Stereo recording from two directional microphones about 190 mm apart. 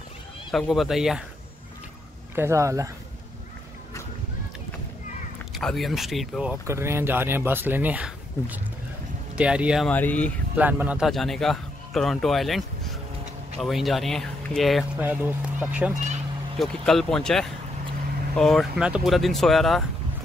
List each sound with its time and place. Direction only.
0.5 s speech: centre (ahead or behind)
2.3 s speech: 15° right (ahead or behind)
5.5 s speech: centre (ahead or behind)
9.8 s speech: 10° left (ahead or behind)
10.5 s speech: 10° right (ahead or behind)